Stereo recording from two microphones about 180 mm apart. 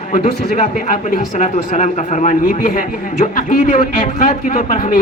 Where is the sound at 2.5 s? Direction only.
55° left (ahead or behind).